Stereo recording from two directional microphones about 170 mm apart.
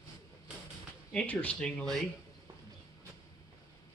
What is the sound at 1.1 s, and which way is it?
Speech, 10° left (ahead or behind).